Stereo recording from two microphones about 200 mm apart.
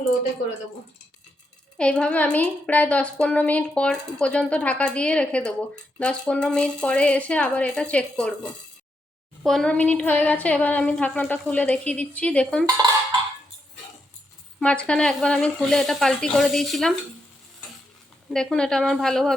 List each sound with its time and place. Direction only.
1.8 s a woman's voice: 5° left (ahead or behind)
9.4 s speech: centre (ahead or behind)
12.6 s dishes: 20° right (ahead or behind)
14.6 s a woman's voice: 5° left (ahead or behind)
18.3 s a woman's voice: 5° left (ahead or behind)